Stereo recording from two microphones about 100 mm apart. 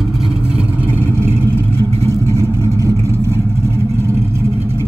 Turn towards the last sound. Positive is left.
turn(degrees=-30)  # may be behind; listen again after turning